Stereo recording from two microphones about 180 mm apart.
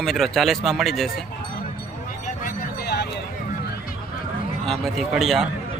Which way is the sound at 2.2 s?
50° left (ahead or behind).